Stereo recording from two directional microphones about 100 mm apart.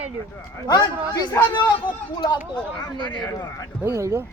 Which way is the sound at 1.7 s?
50° left (ahead or behind).